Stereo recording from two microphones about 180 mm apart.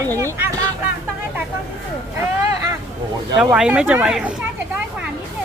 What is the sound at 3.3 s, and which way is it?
Speech, 5° right (ahead or behind).